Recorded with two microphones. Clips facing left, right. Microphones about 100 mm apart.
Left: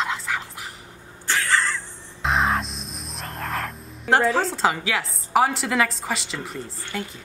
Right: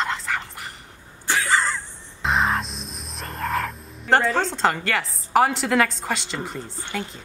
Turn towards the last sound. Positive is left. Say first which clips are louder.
# right 1 dB
turn(degrees=0)  # may be behind; listen again after turning